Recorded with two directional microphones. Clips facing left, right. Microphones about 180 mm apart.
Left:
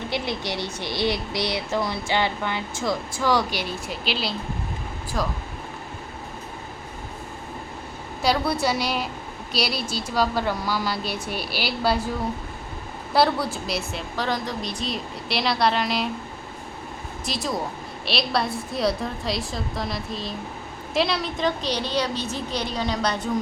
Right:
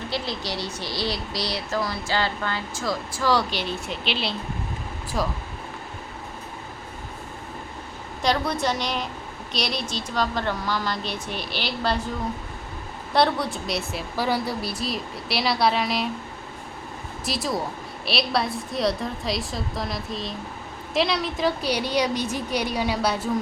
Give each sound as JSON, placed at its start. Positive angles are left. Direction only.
{"t": 0.1, "sound": "a woman's voice", "side_deg": 20}
{"t": 8.2, "sound": "speech", "side_deg": 5}
{"t": 13.1, "sound": "a woman's voice", "side_deg": 5}
{"t": 17.2, "sound": "a woman's voice", "side_deg": 0}